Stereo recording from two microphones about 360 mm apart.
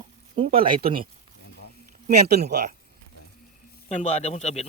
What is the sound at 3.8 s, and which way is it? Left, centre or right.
Speech, centre.